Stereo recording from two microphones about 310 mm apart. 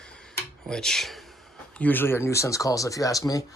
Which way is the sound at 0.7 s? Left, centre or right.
Centre.